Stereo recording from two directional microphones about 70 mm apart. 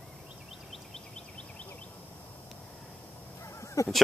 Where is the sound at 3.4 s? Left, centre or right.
Left.